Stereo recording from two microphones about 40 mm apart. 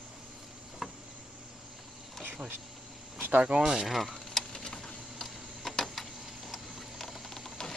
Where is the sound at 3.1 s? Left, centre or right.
Right.